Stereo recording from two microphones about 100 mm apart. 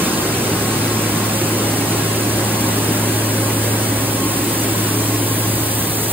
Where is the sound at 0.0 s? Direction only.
20° right (ahead or behind).